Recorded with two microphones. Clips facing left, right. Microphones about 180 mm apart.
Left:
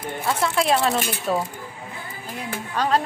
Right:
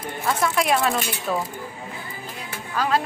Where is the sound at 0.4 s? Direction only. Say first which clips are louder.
Left 1 dB; 30° left (ahead or behind).